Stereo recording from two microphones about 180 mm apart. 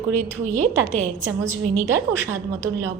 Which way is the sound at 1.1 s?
15° right (ahead or behind).